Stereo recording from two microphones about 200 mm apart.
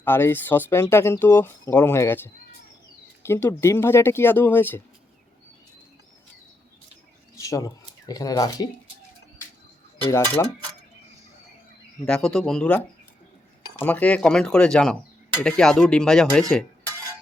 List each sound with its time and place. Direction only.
0.0 s speech: 10° left (ahead or behind)
7.3 s speech: 15° left (ahead or behind)
10.0 s speech: 15° left (ahead or behind)
12.0 s speech: 5° left (ahead or behind)